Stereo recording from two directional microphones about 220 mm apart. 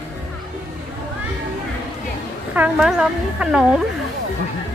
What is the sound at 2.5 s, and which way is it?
Speech, 5° right (ahead or behind).